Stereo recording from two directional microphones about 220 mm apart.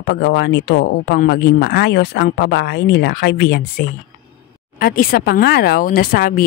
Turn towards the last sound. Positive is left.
turn(degrees=40)  # may be behind; listen again after turning